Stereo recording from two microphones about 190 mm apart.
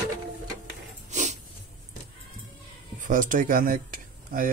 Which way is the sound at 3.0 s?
45° right (ahead or behind).